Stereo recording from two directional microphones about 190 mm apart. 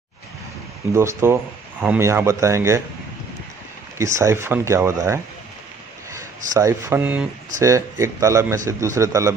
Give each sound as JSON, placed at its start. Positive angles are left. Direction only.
{"t": 0.9, "sound": "speech", "side_deg": -15}
{"t": 4.0, "sound": "speech", "side_deg": -15}